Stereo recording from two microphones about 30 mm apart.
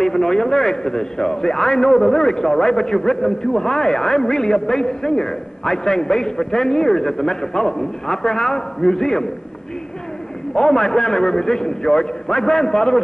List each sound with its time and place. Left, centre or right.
0.0 s a man's voice: centre
10.5 s a man's voice: left